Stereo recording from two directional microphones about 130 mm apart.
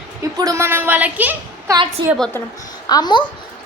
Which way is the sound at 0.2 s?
25° right (ahead or behind).